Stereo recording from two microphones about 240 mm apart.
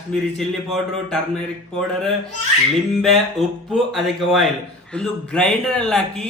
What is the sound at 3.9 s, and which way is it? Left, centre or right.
A man's voice, centre.